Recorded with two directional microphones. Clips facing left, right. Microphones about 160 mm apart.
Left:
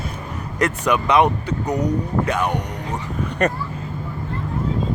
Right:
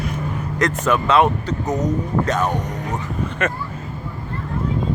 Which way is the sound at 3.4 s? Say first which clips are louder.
Left 4 dB; 40° left (ahead or behind).